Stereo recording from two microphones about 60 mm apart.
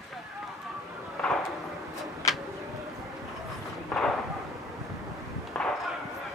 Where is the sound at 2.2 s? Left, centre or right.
Left.